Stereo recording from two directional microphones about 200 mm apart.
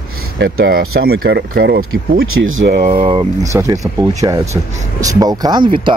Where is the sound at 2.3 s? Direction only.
80° right.